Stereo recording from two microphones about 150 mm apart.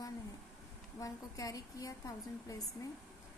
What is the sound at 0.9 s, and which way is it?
A woman's voice, 20° left (ahead or behind).